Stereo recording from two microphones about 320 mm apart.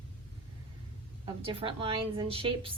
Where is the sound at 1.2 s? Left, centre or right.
Centre.